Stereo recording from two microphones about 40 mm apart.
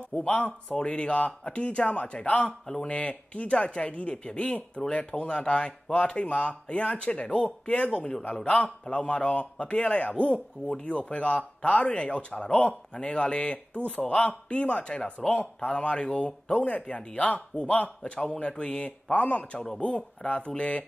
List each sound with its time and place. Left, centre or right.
0.1 s speech: centre
0.7 s a man's voice: left